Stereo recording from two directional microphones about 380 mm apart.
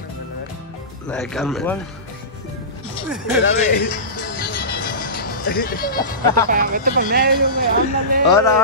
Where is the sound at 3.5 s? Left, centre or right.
Left.